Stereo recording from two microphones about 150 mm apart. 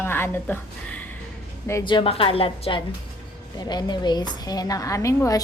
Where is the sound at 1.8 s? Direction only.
30° left (ahead or behind).